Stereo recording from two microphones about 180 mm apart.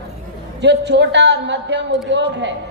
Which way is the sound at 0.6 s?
75° right (ahead or behind).